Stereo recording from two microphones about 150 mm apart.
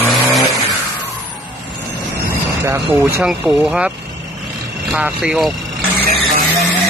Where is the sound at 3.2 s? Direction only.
5° right (ahead or behind).